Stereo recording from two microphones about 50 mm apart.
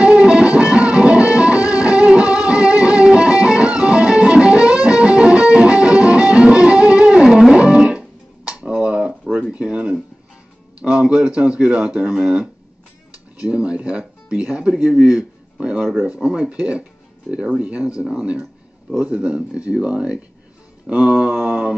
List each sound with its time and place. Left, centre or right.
0.0 s music: centre
7.5 s guitar: right
9.5 s a sound: right
10.8 s speech: centre
13.5 s a man's voice: right
15.8 s speech: centre
16.1 s speech: centre